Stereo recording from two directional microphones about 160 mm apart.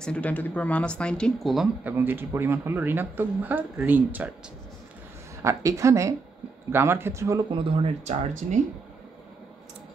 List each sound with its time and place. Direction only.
0.0 s speech: 10° left (ahead or behind)
2.0 s speech: 15° right (ahead or behind)
5.4 s a woman's voice: 20° right (ahead or behind)
7.5 s speech: 35° right (ahead or behind)